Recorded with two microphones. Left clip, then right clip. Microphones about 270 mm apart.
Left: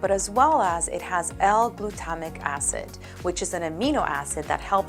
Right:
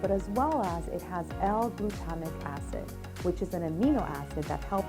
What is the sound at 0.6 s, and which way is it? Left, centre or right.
A woman's voice, centre.